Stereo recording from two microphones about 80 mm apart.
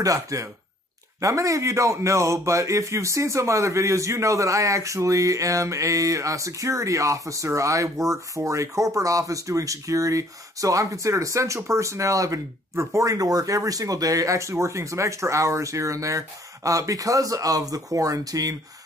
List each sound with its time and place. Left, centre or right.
0.0 s a man's voice: right